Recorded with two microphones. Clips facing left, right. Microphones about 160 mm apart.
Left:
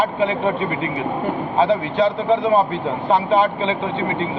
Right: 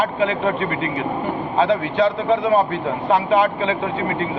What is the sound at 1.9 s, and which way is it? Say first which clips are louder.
Speech: even; centre (ahead or behind).